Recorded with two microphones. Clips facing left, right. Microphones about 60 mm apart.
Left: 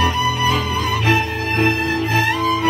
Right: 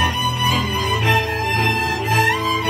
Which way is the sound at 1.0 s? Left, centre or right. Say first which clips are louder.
Right 1 dB; centre.